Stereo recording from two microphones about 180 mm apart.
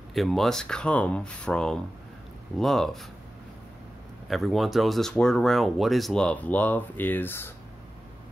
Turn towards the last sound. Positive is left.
turn(degrees=10)  # may be behind; listen again after turning